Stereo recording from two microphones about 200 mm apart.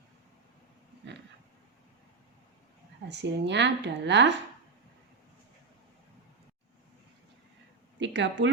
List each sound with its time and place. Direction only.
3.1 s speech: 60° right (ahead or behind)
7.9 s speech: 65° right (ahead or behind)